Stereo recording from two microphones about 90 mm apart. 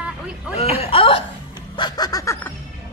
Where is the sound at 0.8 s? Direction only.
90° left.